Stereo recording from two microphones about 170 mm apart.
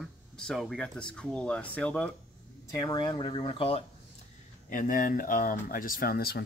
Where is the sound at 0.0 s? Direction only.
5° left (ahead or behind).